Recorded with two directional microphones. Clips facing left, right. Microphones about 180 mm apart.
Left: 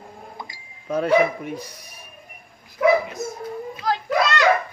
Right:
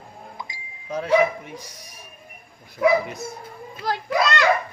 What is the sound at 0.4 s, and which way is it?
Speech, 60° left (ahead or behind).